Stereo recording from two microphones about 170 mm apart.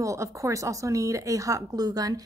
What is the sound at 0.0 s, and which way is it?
A woman's voice, 20° right (ahead or behind).